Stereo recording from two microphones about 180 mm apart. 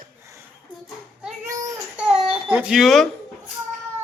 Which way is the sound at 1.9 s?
5° right (ahead or behind).